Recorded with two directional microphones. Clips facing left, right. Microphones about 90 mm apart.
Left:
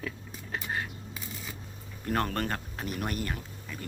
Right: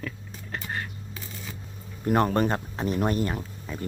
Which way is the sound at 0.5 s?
5° left (ahead or behind).